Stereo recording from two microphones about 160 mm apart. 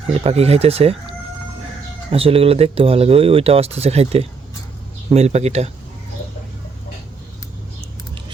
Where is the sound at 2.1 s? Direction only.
35° right (ahead or behind).